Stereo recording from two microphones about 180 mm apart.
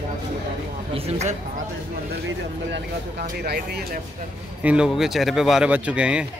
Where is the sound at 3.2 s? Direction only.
60° right (ahead or behind).